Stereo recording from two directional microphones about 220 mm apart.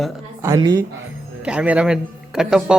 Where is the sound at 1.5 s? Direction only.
5° right (ahead or behind).